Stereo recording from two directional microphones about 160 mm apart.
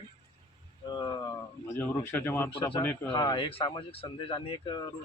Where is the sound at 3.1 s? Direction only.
30° left (ahead or behind).